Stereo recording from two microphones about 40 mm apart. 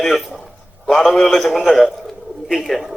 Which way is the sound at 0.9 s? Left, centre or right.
Left.